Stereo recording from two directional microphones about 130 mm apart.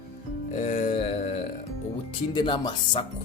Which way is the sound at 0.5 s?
85° left.